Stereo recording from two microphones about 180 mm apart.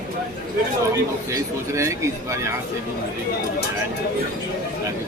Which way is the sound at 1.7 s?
15° right (ahead or behind).